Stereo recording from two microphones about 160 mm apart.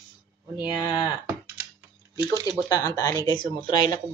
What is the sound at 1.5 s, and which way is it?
Typing, 10° right (ahead or behind).